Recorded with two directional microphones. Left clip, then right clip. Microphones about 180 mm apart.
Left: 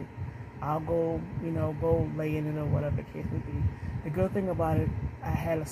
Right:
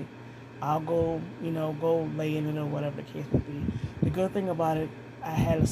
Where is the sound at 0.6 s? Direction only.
10° right (ahead or behind).